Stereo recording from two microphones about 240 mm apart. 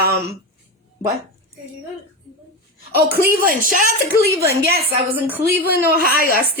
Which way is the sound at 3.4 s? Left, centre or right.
Right.